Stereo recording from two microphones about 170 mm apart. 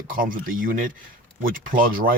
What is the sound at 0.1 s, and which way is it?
Speech, 55° right (ahead or behind).